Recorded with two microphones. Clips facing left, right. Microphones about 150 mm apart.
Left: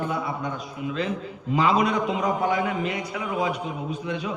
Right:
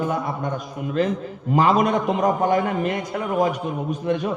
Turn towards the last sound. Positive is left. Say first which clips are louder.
# right 6 dB
turn(degrees=-50)  # may be behind; listen again after turning